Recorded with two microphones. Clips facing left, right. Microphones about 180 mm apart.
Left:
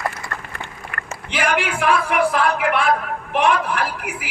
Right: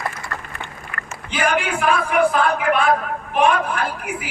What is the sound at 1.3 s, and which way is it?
A man's voice, 75° left (ahead or behind).